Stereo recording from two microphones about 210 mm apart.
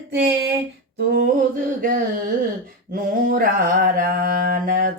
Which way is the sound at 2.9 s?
40° right (ahead or behind).